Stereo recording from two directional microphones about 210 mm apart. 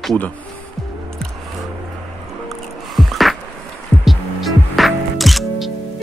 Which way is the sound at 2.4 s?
Centre (ahead or behind).